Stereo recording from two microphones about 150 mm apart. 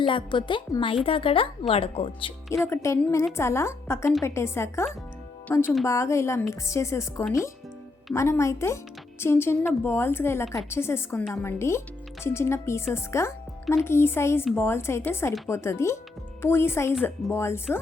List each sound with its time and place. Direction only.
0.0 s a woman's voice: 35° left (ahead or behind)
2.6 s a woman's voice: 20° left (ahead or behind)